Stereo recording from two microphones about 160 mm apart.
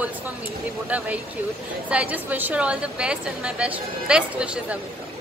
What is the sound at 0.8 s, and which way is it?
A woman's voice, 10° right (ahead or behind).